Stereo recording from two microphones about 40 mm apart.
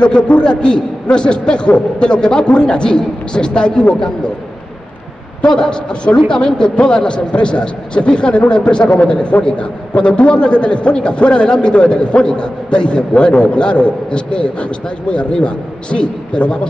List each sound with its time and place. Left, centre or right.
0.0 s a man's voice: left
5.5 s a man's voice: centre